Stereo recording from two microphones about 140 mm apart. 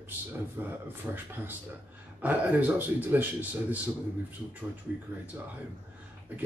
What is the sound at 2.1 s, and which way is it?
Speech, 10° right (ahead or behind).